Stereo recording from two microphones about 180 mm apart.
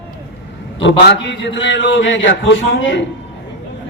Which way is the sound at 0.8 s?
80° left.